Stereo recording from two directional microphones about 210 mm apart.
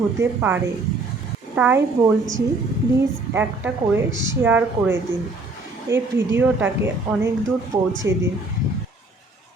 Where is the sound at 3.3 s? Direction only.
10° right (ahead or behind).